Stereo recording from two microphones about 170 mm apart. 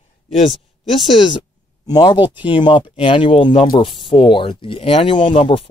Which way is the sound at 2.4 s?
30° left (ahead or behind).